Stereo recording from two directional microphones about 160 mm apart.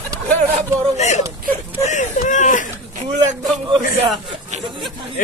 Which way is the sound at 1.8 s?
50° left (ahead or behind).